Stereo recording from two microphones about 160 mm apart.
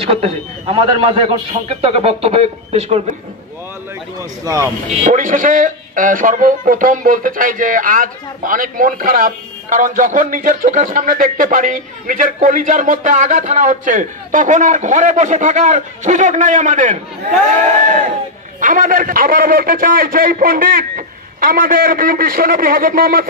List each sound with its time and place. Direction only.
0.1 s a man's voice: 40° right (ahead or behind)
4.2 s speech: 20° right (ahead or behind)
5.0 s speech: 55° right (ahead or behind)
18.6 s speech: 55° right (ahead or behind)